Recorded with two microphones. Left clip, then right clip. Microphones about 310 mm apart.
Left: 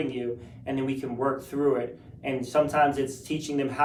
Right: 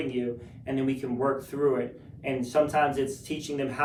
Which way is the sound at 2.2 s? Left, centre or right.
Centre.